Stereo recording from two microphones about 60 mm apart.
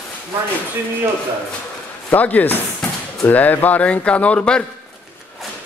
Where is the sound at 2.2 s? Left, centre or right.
Left.